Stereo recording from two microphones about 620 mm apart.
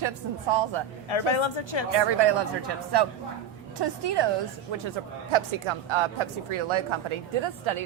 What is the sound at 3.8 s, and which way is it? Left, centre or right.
Speech, right.